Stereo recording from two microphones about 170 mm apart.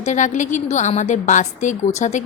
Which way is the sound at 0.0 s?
45° left (ahead or behind).